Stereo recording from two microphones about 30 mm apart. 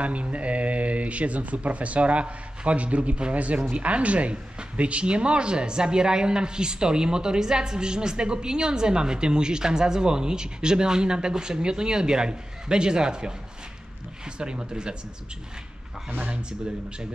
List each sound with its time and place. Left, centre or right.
0.0 s speech: right
3.3 s speech: right